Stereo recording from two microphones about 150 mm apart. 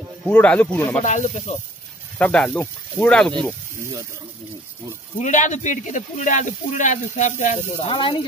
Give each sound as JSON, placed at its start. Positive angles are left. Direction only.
{"t": 0.3, "sound": "speech", "side_deg": 10}
{"t": 1.0, "sound": "speech", "side_deg": 55}
{"t": 2.1, "sound": "speech", "side_deg": 10}
{"t": 5.2, "sound": "speech", "side_deg": 55}
{"t": 7.9, "sound": "speech", "side_deg": 35}